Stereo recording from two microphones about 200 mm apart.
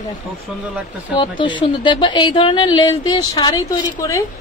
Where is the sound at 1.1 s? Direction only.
25° left (ahead or behind).